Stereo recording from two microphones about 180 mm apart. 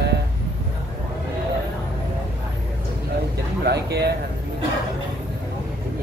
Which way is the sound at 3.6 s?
65° right (ahead or behind).